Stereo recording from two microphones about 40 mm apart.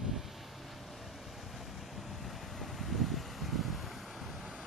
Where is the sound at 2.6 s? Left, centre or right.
Centre.